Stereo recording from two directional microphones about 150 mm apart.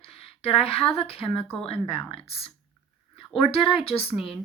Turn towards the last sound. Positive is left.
turn(degrees=40)  # may be behind; listen again after turning